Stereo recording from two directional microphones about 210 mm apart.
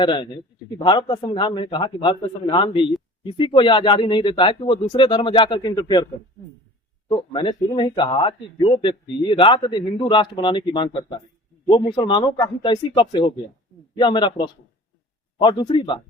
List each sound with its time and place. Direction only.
0.0 s speech: 20° left (ahead or behind)
7.1 s speech: 20° left (ahead or behind)